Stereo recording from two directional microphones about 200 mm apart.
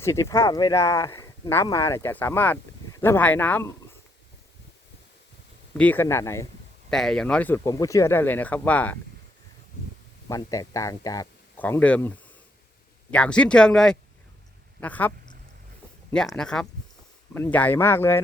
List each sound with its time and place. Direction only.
0.0 s speech: 15° left (ahead or behind)
5.7 s speech: 10° left (ahead or behind)
6.9 s speech: 5° left (ahead or behind)
10.2 s speech: 15° left (ahead or behind)
16.1 s speech: 5° left (ahead or behind)